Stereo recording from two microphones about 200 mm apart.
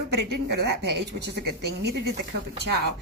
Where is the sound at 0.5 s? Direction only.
55° right (ahead or behind).